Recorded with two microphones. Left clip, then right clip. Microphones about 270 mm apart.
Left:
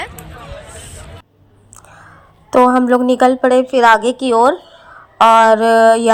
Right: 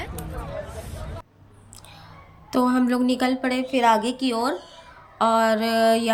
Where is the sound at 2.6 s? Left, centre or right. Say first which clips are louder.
Left 11 dB; left.